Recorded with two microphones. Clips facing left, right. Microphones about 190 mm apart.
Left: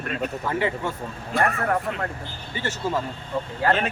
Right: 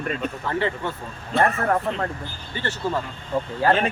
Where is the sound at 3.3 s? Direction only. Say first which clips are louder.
Right 3 dB; 45° right (ahead or behind).